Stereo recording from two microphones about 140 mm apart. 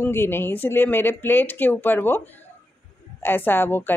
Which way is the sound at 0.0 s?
15° left (ahead or behind).